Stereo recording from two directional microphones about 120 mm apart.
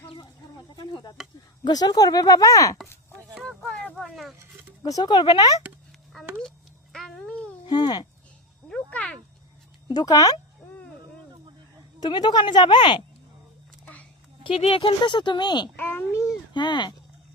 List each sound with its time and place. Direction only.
1.2 s speech: 5° right (ahead or behind)
1.6 s speech: 35° left (ahead or behind)
3.4 s a sound: centre (ahead or behind)
4.8 s speech: 35° left (ahead or behind)
6.1 s a sound: centre (ahead or behind)
6.9 s babbling: 5° left (ahead or behind)
7.6 s speech: 35° left (ahead or behind)
8.7 s a sound: 10° left (ahead or behind)
9.9 s speech: 35° left (ahead or behind)
11.9 s speech: 35° left (ahead or behind)
14.4 s speech: 50° left (ahead or behind)
15.7 s a child's voice: 15° left (ahead or behind)
16.6 s speech: 40° left (ahead or behind)